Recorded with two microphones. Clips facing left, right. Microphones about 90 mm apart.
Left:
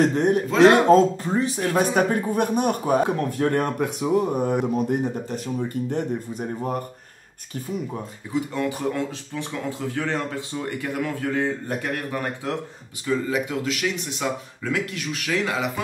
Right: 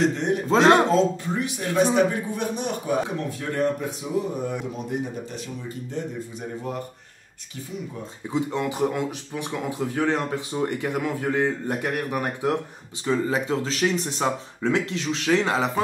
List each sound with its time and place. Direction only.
0.0 s speech: 45° left (ahead or behind)
0.5 s speech: 30° right (ahead or behind)
0.8 s speech: 45° left (ahead or behind)
8.3 s speech: 20° right (ahead or behind)
13.0 s speech: 30° right (ahead or behind)